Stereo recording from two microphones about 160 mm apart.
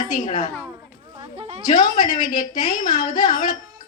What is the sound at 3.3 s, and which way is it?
Speech, 60° left (ahead or behind).